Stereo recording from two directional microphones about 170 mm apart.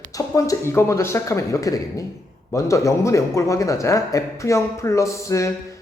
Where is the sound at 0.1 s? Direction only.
20° left (ahead or behind).